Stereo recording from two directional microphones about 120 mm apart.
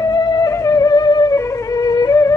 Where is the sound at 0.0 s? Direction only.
35° left (ahead or behind).